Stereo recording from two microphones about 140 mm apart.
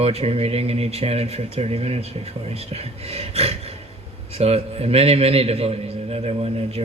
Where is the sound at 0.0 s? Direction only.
45° right (ahead or behind).